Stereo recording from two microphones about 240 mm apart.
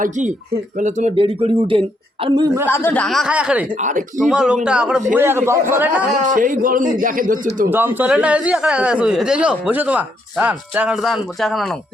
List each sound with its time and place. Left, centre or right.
0.0 s a man's voice: right
2.6 s speech: centre
3.8 s a man's voice: right
4.2 s a man's voice: centre
6.2 s a man's voice: right
7.7 s speech: centre